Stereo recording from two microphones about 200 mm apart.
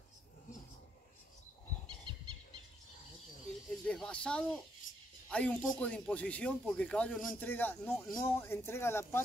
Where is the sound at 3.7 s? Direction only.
5° left (ahead or behind).